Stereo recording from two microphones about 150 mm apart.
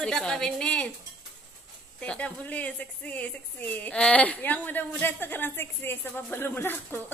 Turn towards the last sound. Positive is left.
turn(degrees=15)  # may be behind; listen again after turning